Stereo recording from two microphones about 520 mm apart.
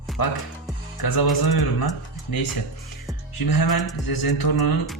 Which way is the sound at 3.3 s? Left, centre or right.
Left.